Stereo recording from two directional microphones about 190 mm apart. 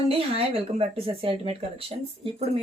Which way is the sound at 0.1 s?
30° right (ahead or behind).